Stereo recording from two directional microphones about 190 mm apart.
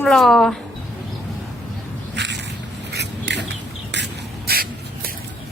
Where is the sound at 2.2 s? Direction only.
65° right (ahead or behind).